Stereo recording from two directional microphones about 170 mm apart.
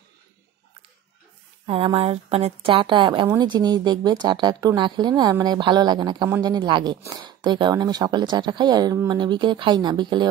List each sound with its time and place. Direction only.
1.7 s a woman's voice: 30° right (ahead or behind)